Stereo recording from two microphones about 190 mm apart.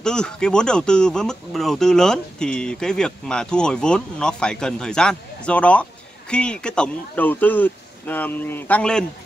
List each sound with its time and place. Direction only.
0.0 s speech: 5° left (ahead or behind)